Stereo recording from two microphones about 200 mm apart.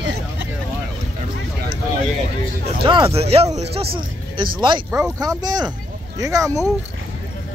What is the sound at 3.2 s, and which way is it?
Speech, 30° right (ahead or behind).